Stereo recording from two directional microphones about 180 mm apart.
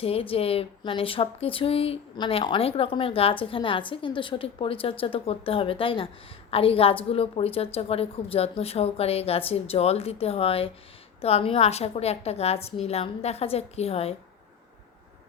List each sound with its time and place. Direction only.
0.0 s speech: 30° left (ahead or behind)